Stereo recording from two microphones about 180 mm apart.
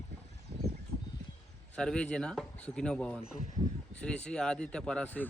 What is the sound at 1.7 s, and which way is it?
Speech, 5° left (ahead or behind).